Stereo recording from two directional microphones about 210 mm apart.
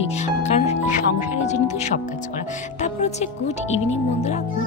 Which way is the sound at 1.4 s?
35° left (ahead or behind).